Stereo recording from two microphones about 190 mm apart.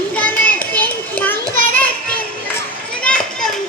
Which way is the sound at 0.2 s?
5° left (ahead or behind).